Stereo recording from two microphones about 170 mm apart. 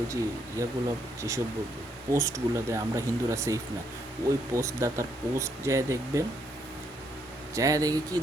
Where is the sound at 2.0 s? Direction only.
20° right (ahead or behind).